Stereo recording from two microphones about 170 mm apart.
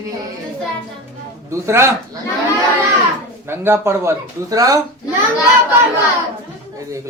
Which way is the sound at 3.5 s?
15° right (ahead or behind).